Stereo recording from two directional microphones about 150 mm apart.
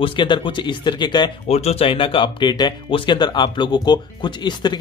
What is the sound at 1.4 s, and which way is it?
Speech, 45° left (ahead or behind).